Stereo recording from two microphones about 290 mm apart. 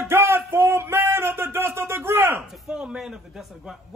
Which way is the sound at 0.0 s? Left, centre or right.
Centre.